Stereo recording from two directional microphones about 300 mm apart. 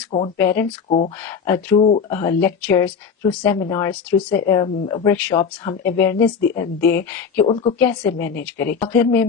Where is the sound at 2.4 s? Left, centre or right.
Centre.